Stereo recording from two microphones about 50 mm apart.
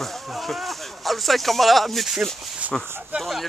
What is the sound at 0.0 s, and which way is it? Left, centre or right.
Speech, centre.